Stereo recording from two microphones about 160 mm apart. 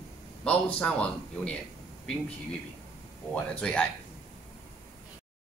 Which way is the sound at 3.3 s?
10° left (ahead or behind).